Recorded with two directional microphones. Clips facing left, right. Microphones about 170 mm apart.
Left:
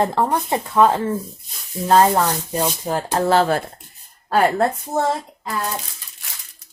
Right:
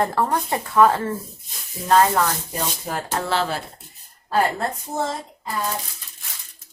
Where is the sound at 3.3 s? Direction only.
50° left (ahead or behind).